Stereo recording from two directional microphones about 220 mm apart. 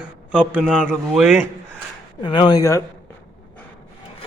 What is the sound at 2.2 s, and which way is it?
Speech, 20° left (ahead or behind).